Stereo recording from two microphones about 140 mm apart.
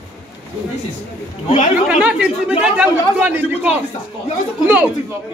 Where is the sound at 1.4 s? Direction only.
55° left (ahead or behind).